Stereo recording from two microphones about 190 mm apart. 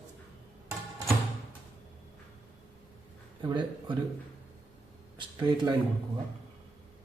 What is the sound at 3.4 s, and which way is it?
Speech, 25° right (ahead or behind).